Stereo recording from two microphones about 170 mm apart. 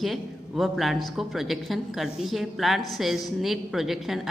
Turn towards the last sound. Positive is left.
turn(degrees=0)  # may be behind; listen again after turning